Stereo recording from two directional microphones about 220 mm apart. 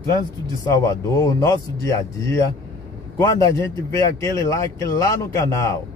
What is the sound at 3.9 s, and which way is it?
Speech, 15° left (ahead or behind).